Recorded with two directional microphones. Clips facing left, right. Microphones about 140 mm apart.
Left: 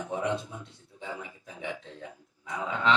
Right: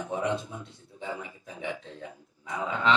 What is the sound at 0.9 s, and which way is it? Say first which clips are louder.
Speech: right 3 dB; 25° right (ahead or behind).